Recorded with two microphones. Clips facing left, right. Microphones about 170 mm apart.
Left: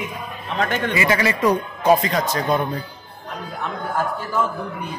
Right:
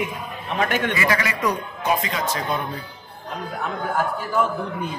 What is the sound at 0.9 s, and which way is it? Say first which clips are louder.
Speech: left 3 dB; 25° left (ahead or behind).